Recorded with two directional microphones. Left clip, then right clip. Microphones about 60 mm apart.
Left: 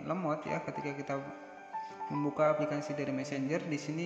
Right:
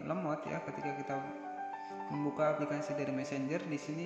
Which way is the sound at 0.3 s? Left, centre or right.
Left.